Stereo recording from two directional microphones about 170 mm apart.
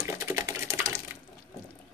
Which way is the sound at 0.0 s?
15° right (ahead or behind).